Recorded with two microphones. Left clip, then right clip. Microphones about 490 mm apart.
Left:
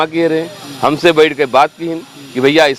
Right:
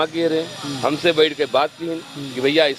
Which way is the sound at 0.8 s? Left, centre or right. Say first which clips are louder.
Left 7 dB; left.